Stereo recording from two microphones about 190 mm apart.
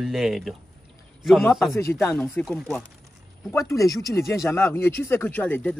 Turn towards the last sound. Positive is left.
turn(degrees=10)  # may be behind; listen again after turning